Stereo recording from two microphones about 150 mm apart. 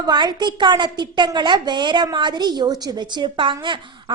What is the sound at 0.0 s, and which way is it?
A woman's voice, 30° right (ahead or behind).